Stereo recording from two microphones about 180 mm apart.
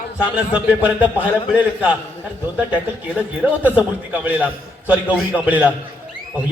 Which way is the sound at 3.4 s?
10° right (ahead or behind).